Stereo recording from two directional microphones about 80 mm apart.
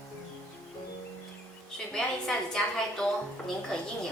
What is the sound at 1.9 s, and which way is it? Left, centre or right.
A woman's voice, centre.